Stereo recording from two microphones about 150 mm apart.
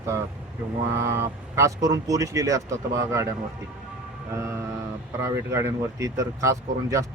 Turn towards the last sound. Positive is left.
turn(degrees=-20)  # may be behind; listen again after turning